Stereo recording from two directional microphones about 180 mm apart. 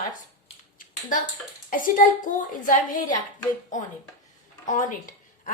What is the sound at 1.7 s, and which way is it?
A woman's voice, 50° left (ahead or behind).